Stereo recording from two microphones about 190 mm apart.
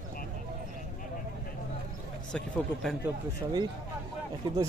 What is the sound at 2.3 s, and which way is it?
Speech, centre (ahead or behind).